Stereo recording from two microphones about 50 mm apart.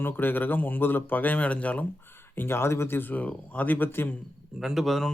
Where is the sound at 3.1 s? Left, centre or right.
Left.